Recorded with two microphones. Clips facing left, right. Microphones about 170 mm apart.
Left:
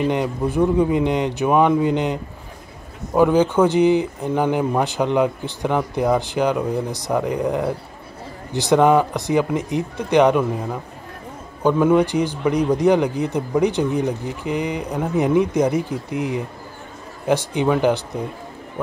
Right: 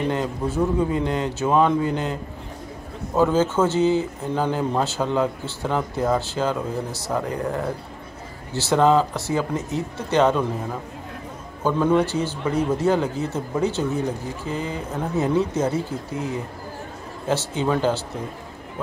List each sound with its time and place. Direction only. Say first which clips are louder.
0.1 s speech: left 3 dB; 15° left (ahead or behind)
3.2 s speech: left 4 dB; 15° left (ahead or behind)
11.6 s speech: left 4 dB; 15° left (ahead or behind)